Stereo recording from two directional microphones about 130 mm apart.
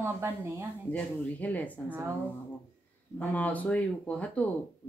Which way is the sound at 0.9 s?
10° left (ahead or behind).